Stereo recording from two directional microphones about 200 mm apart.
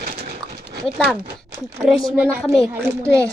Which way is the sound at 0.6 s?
50° right (ahead or behind).